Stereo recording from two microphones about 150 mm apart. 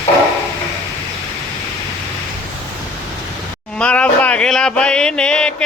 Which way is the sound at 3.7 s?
10° left (ahead or behind).